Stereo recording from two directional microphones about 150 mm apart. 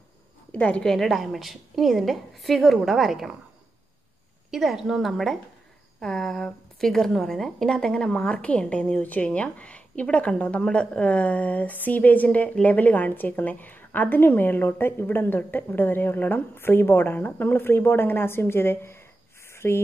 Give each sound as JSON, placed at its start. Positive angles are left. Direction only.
{"t": 0.5, "sound": "a woman's voice", "side_deg": 10}
{"t": 4.5, "sound": "a woman's voice", "side_deg": 0}
{"t": 19.5, "sound": "a sound", "side_deg": 15}